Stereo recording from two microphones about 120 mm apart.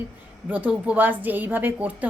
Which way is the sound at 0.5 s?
10° right (ahead or behind).